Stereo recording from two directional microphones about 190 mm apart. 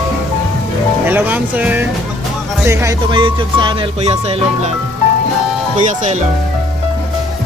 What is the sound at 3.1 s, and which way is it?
Speech, 25° right (ahead or behind).